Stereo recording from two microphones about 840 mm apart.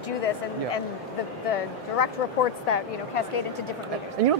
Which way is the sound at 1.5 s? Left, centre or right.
Left.